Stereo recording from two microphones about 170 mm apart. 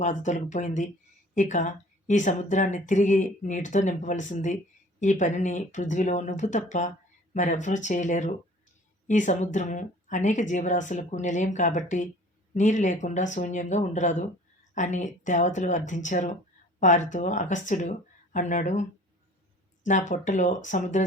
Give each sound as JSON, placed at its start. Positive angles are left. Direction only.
{"t": 0.0, "sound": "a woman's voice", "side_deg": 45}